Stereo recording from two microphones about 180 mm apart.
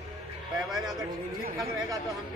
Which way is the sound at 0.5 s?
Centre (ahead or behind).